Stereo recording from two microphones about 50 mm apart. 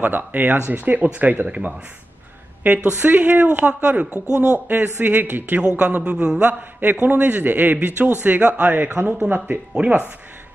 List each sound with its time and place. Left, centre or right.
0.0 s a man's voice: right
2.6 s a man's voice: right
5.6 s a man's voice: centre
6.8 s a man's voice: right
8.7 s a man's voice: right